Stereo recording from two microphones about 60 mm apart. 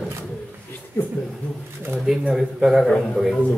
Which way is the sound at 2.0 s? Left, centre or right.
Centre.